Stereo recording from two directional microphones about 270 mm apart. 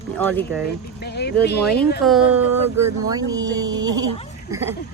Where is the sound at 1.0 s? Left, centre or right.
Left.